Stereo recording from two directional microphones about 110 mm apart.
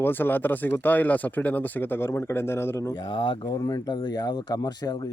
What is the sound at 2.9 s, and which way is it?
Speech, 45° left (ahead or behind).